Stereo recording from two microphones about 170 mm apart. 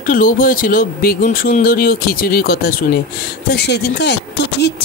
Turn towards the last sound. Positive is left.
turn(degrees=75)  # may be behind; listen again after turning